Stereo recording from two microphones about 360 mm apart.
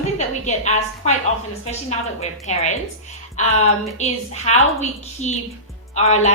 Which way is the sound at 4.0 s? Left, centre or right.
Centre.